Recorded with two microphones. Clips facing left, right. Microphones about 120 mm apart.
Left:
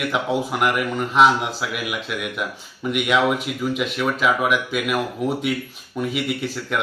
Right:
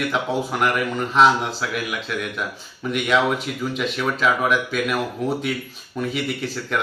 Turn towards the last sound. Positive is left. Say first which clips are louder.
# even
turn(degrees=10)  # may be behind; listen again after turning